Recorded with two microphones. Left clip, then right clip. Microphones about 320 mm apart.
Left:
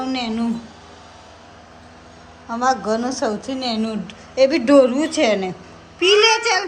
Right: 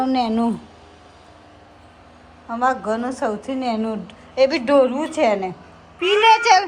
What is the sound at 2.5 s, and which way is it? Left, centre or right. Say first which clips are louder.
A woman's voice: left 1 dB; centre.